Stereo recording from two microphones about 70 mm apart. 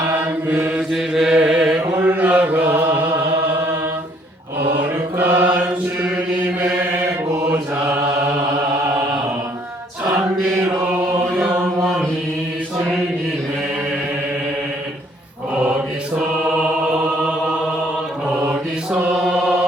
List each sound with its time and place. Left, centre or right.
0.4 s mantra: right
0.8 s mantra: centre
1.3 s chant: centre
2.0 s chant: right
4.8 s mantra: right
19.1 s chant: centre